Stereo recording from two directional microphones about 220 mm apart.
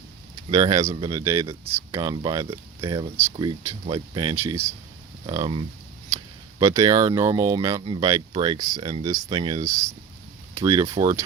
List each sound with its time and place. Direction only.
0.5 s speech: 15° right (ahead or behind)